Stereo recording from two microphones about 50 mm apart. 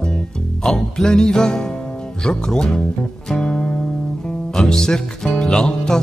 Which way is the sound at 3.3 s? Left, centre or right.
Centre.